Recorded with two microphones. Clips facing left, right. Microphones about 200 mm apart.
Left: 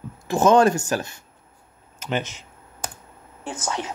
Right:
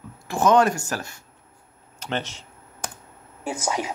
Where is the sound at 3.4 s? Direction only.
10° right (ahead or behind).